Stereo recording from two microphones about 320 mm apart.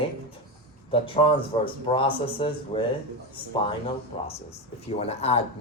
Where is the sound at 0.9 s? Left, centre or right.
Centre.